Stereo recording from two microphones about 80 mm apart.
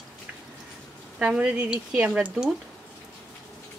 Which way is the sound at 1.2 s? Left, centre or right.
Centre.